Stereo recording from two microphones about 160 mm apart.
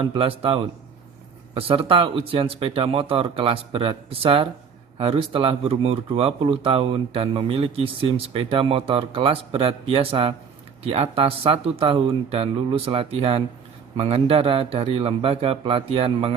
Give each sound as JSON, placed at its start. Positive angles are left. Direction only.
{"t": 0.0, "sound": "speech", "side_deg": -35}